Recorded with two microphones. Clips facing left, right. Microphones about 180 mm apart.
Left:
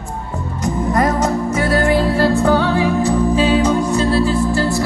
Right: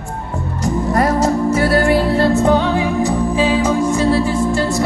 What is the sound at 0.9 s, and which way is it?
Music, 35° right (ahead or behind).